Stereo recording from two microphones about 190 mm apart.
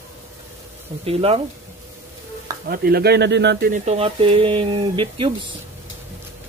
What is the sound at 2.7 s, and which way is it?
Speech, 55° right (ahead or behind).